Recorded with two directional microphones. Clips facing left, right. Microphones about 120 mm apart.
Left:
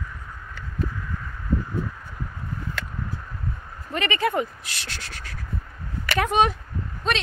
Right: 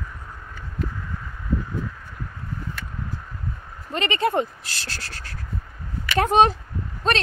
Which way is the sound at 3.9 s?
25° right (ahead or behind).